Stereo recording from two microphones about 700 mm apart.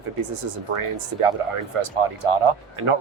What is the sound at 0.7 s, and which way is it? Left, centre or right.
Speech, right.